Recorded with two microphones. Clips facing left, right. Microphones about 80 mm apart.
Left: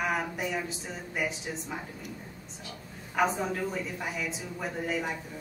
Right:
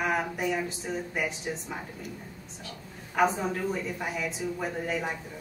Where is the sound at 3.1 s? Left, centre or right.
Centre.